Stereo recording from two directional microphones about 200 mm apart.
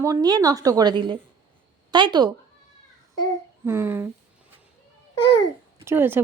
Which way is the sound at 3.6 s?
10° right (ahead or behind).